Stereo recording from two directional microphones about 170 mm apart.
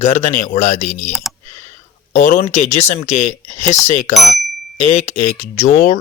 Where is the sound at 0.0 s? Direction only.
40° left (ahead or behind).